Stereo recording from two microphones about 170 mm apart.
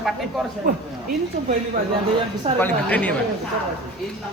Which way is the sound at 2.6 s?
10° left (ahead or behind).